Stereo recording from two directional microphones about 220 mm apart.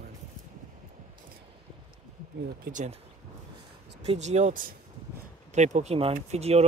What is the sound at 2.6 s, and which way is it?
Speech, 35° right (ahead or behind).